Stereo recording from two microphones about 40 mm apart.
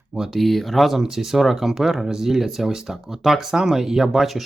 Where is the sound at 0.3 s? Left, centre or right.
Centre.